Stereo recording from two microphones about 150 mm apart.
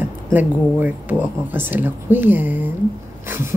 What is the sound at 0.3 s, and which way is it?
Speech, 10° right (ahead or behind).